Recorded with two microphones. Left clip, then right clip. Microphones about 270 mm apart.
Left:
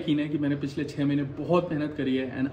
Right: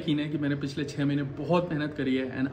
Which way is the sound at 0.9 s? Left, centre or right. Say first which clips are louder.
Left 3 dB; right.